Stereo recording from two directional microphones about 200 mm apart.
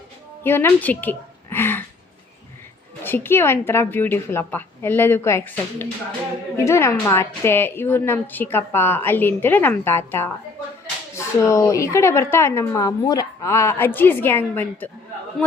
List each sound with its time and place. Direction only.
0.4 s a woman's voice: 10° left (ahead or behind)
3.0 s a woman's voice: 10° left (ahead or behind)